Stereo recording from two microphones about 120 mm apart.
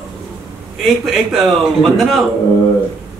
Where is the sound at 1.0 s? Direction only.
Centre (ahead or behind).